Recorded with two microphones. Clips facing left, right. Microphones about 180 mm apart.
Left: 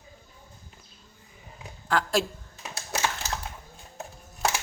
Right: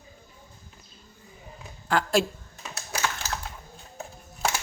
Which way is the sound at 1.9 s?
Centre (ahead or behind).